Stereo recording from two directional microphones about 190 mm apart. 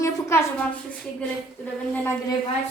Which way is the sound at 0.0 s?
15° left (ahead or behind).